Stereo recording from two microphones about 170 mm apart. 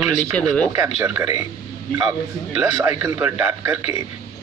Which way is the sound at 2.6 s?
15° right (ahead or behind).